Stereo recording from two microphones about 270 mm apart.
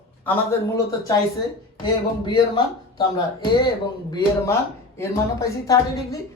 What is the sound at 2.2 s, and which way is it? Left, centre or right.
Speech, centre.